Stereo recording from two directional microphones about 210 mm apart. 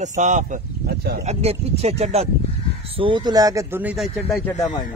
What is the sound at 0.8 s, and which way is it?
Speech, 50° right (ahead or behind).